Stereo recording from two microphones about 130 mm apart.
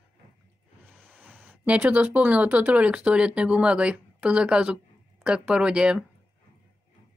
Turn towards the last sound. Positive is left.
turn(degrees=-5)  # may be behind; listen again after turning